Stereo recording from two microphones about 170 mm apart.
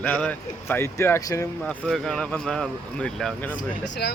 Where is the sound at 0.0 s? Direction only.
10° left (ahead or behind).